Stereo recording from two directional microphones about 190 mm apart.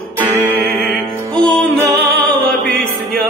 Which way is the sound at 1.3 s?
5° left (ahead or behind).